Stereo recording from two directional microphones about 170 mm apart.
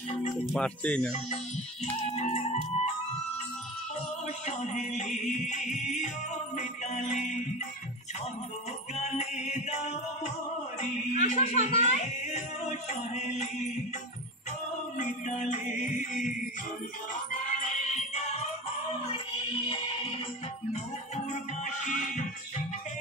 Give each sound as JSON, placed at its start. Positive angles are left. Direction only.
{"t": 0.6, "sound": "speech", "side_deg": 5}
{"t": 2.0, "sound": "music", "side_deg": 40}
{"t": 4.5, "sound": "music", "side_deg": 45}
{"t": 8.9, "sound": "music", "side_deg": 40}
{"t": 10.8, "sound": "speech", "side_deg": 45}
{"t": 15.0, "sound": "music", "side_deg": 45}
{"t": 19.1, "sound": "music", "side_deg": 30}
{"t": 21.3, "sound": "music", "side_deg": 45}